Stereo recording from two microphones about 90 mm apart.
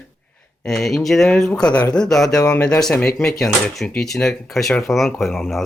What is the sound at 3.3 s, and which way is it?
Speech, centre (ahead or behind).